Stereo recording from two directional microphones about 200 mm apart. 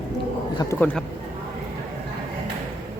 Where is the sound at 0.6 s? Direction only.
15° left (ahead or behind).